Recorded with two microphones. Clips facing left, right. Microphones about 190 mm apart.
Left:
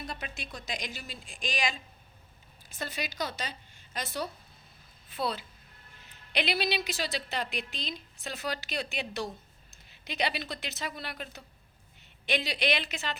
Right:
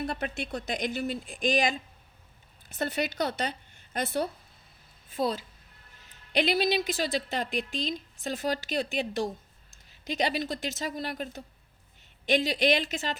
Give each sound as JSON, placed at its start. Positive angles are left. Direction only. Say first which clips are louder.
{"t": 0.0, "sound": "speech", "louder": "right 8 dB", "side_deg": -60}
{"t": 5.0, "sound": "a woman's voice", "louder": "right 4 dB", "side_deg": -45}